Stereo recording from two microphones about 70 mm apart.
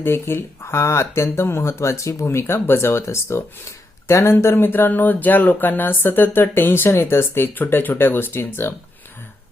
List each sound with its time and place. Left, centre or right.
0.0 s speech: left